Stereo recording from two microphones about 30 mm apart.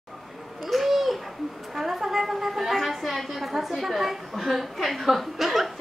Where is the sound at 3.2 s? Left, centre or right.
Centre.